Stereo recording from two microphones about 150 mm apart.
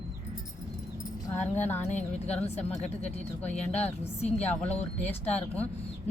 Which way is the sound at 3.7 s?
45° left (ahead or behind).